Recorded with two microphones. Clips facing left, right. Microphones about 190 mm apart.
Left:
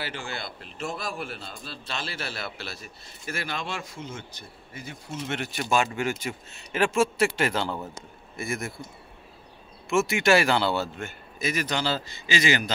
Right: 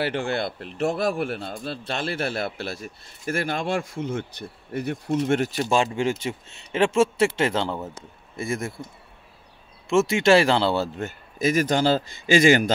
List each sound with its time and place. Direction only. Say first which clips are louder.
0.0 s a man's voice: right 10 dB; 60° right (ahead or behind); by 8.7 s 25° right (ahead or behind)
9.8 s a man's voice: right 4 dB; 25° right (ahead or behind); by 12.7 s 50° right (ahead or behind)